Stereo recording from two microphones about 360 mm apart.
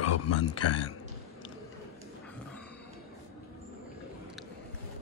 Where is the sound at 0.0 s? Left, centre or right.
Left.